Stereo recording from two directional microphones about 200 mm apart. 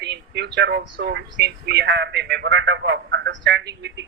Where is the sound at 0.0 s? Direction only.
55° right (ahead or behind).